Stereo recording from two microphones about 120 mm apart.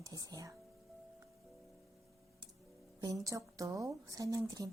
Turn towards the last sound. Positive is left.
turn(degrees=-30)  # may be behind; listen again after turning